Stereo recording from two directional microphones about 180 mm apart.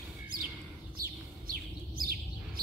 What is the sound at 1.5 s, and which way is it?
Bird, 55° right (ahead or behind).